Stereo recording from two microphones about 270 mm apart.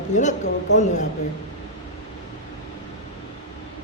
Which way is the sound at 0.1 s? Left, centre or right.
Left.